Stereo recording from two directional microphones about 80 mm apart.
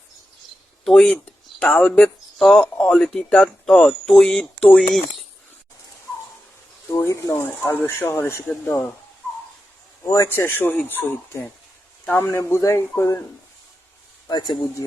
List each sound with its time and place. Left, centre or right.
0.9 s speech: centre
3.8 s speech: centre
7.0 s speech: left
10.0 s speech: left
10.2 s speech: left
14.3 s speech: left